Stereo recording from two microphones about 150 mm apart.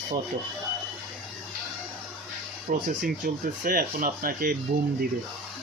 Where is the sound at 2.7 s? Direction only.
60° right (ahead or behind).